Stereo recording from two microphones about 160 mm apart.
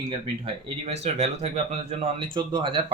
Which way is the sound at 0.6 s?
40° right (ahead or behind).